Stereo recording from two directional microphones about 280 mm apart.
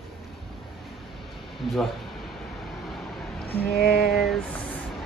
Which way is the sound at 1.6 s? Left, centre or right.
Centre.